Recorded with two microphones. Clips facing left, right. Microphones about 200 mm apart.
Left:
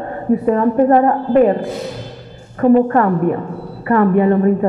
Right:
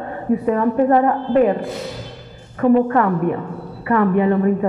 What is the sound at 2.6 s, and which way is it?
A woman's voice, 40° left (ahead or behind).